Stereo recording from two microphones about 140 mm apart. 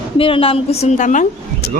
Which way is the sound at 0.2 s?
40° left (ahead or behind).